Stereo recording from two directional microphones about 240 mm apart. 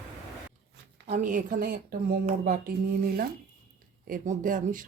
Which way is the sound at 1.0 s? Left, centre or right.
Right.